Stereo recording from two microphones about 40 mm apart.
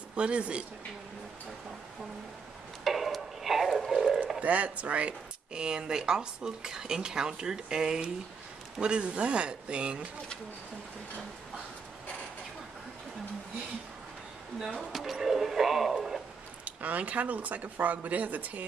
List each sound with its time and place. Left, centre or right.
0.1 s speech: right
2.8 s a sound: centre
4.4 s speech: right
5.5 s speech: right
14.8 s speech: centre
16.6 s speech: right